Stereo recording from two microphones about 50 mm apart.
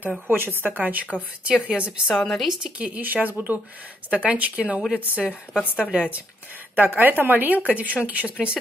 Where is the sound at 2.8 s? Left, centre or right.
Right.